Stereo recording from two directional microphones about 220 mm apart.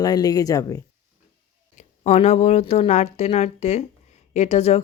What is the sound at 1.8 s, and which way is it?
Speech, 30° left (ahead or behind).